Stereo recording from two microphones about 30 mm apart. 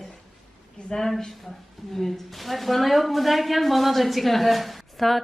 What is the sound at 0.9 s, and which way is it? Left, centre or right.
Speech, left.